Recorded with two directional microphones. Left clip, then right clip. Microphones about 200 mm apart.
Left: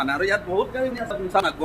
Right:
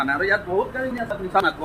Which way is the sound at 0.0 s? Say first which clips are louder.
Right 1 dB; centre (ahead or behind).